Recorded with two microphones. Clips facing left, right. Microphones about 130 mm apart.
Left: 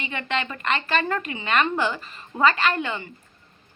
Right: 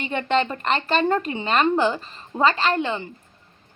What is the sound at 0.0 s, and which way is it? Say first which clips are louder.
A woman's voice: right 6 dB; 40° right (ahead or behind).